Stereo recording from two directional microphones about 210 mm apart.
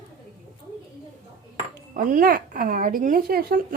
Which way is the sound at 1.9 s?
40° right (ahead or behind).